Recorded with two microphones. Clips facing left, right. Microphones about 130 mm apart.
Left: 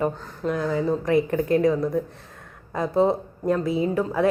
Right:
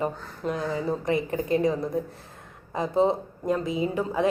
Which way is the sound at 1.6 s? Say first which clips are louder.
Left 4 dB; 25° right (ahead or behind).